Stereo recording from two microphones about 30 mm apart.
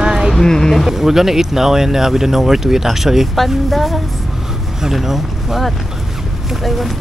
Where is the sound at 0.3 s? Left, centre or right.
Centre.